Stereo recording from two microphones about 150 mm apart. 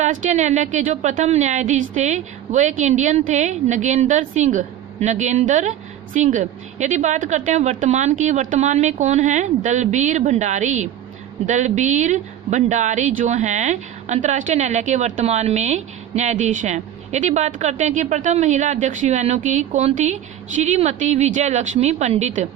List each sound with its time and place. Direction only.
0.0 s a woman's voice: 55° right (ahead or behind)